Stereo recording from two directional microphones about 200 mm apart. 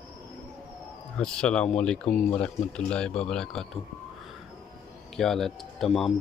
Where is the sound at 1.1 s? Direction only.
5° left (ahead or behind).